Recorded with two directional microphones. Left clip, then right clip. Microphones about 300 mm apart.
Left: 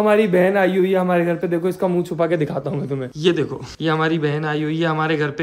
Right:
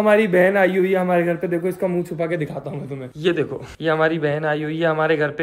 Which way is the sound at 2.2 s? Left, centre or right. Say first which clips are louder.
Left 6 dB; centre.